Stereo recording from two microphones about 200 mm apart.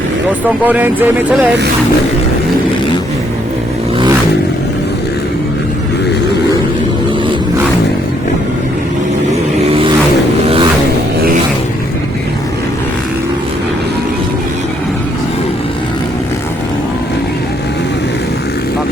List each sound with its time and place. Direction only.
0.6 s speech: 10° right (ahead or behind)